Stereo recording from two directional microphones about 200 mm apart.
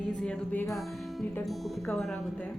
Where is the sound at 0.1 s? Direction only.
5° left (ahead or behind).